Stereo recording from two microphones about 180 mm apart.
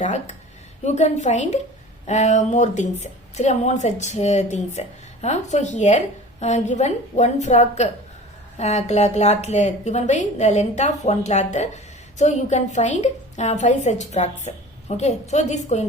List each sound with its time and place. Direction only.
0.0 s a woman's voice: 40° left (ahead or behind)